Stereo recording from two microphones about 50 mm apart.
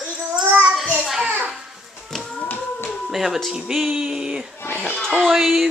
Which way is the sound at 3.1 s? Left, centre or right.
Centre.